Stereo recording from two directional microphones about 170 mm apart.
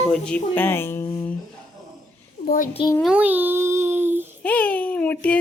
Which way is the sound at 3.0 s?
10° right (ahead or behind).